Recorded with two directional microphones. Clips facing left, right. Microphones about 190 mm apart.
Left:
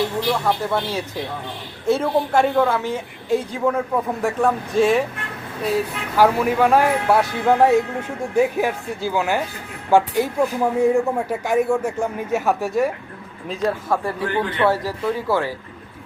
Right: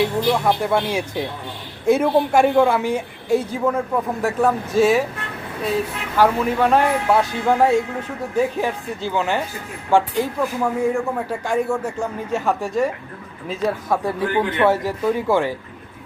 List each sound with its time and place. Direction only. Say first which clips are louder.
0.4 s a woman's voice: right 2 dB; 15° right (ahead or behind)
6.1 s a man's voice: left 1 dB; 10° left (ahead or behind)
14.0 s a woman's voice: right 2 dB; 15° right (ahead or behind)